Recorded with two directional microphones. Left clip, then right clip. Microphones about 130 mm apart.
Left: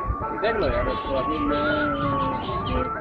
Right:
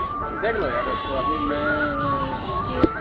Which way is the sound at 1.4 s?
45° left (ahead or behind).